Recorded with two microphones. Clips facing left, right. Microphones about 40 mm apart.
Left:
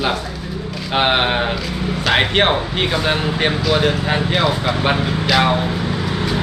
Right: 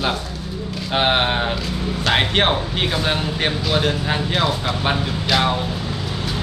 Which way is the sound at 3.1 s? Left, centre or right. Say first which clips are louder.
Left 3 dB; left.